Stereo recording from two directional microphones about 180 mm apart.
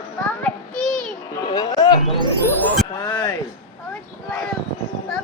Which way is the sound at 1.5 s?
20° left (ahead or behind).